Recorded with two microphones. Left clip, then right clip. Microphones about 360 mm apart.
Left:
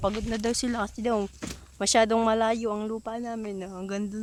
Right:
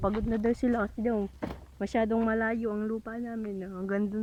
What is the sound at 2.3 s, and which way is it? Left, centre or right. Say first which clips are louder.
Speech: left 5 dB; centre.